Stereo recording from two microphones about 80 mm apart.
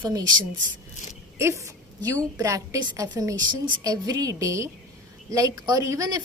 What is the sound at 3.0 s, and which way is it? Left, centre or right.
A woman's voice, right.